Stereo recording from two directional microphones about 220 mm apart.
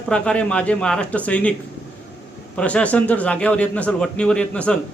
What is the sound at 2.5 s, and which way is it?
Speech, 5° left (ahead or behind).